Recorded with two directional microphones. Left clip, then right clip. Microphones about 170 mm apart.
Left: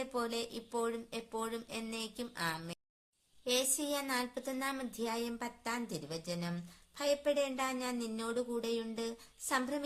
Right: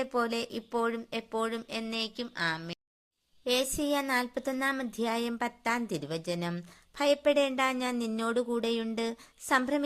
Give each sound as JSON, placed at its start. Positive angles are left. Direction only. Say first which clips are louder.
{"t": 0.0, "sound": "speech", "louder": "right 7 dB", "side_deg": -40}
{"t": 3.4, "sound": "speech", "louder": "right 5 dB", "side_deg": -40}